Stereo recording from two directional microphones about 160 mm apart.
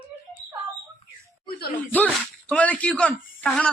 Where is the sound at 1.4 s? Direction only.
70° left (ahead or behind).